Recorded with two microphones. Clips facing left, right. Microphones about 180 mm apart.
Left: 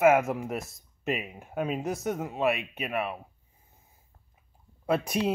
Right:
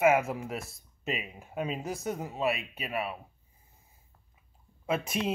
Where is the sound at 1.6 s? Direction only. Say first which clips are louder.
Left 4 dB; 55° left (ahead or behind).